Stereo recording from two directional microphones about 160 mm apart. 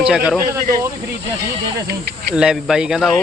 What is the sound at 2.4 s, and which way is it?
Speech, 5° right (ahead or behind).